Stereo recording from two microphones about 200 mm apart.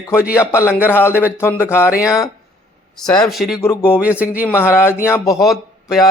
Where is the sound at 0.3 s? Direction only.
15° left (ahead or behind).